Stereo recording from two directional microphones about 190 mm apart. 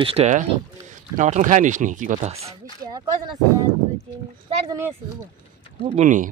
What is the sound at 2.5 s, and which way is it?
Speech, 20° right (ahead or behind).